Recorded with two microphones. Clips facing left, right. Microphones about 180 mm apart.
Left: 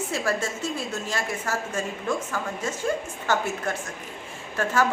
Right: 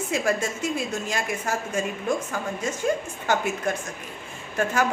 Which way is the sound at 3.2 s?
15° right (ahead or behind).